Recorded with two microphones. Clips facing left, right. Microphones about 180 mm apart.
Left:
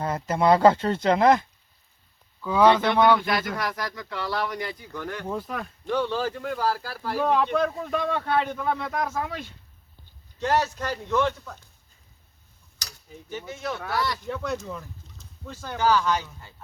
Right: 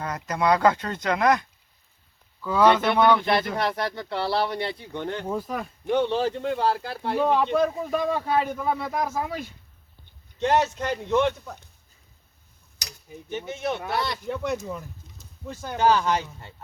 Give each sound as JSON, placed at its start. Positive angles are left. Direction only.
{"t": 0.0, "sound": "speech", "side_deg": 25}
{"t": 2.4, "sound": "speech", "side_deg": 10}
{"t": 3.2, "sound": "speech", "side_deg": -30}
{"t": 5.3, "sound": "speech", "side_deg": 0}
{"t": 5.8, "sound": "speech", "side_deg": -20}
{"t": 7.2, "sound": "a man's voice", "side_deg": -5}
{"t": 10.4, "sound": "speech", "side_deg": -20}
{"t": 13.3, "sound": "speech", "side_deg": -20}